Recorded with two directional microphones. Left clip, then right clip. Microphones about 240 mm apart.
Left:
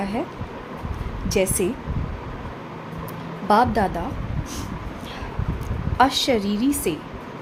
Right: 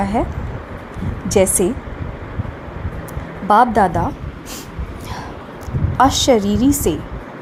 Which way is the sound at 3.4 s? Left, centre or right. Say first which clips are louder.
Right 6 dB; centre.